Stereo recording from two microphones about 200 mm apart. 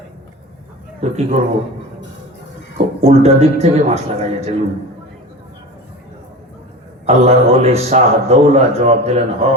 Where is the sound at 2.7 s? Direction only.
35° right (ahead or behind).